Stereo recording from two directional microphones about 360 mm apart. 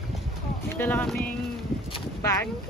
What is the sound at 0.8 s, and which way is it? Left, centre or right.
Speech, centre.